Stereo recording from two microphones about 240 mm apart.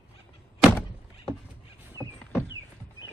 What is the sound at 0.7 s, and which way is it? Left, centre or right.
Thunk, centre.